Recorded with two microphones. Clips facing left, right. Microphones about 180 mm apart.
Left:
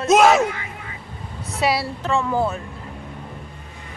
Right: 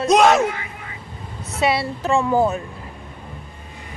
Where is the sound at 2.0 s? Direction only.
10° right (ahead or behind).